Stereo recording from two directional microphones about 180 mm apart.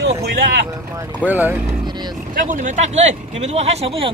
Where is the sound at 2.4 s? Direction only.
45° right (ahead or behind).